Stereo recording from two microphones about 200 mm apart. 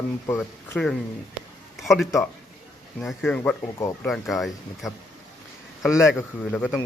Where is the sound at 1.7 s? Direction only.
Centre (ahead or behind).